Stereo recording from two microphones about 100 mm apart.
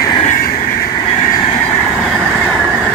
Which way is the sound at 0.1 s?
60° left (ahead or behind).